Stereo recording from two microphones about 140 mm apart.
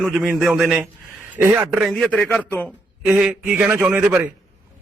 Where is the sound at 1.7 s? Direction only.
Centre (ahead or behind).